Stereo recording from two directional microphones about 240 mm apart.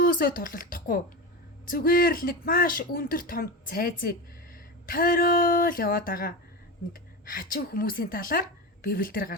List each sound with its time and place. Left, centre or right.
0.0 s speech: left